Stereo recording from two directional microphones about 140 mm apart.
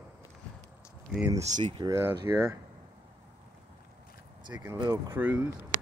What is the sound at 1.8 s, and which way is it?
Speech, 15° right (ahead or behind).